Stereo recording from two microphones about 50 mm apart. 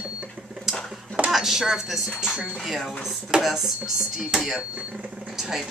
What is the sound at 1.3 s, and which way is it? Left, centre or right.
Speech, centre.